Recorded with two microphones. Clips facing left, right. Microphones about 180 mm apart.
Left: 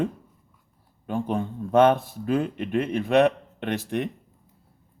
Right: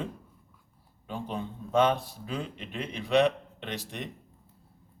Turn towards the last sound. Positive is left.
turn(degrees=55)  # may be behind; listen again after turning